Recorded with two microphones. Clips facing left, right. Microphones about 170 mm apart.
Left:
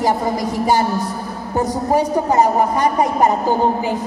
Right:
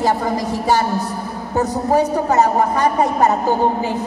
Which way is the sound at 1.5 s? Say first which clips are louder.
Right 1 dB; 10° left (ahead or behind).